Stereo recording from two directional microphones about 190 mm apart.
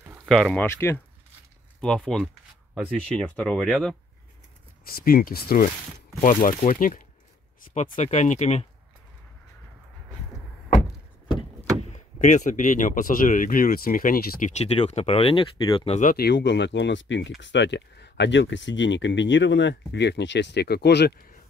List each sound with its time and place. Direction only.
0.3 s speech: centre (ahead or behind)
4.8 s speech: 50° left (ahead or behind); by 8.6 s 35° left (ahead or behind)
12.2 s speech: 40° left (ahead or behind)
16.0 s speech: 50° left (ahead or behind)